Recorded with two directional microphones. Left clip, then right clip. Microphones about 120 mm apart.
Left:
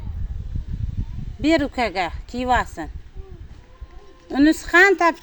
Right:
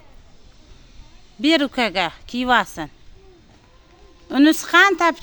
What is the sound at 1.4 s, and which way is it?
Speech, 60° right (ahead or behind).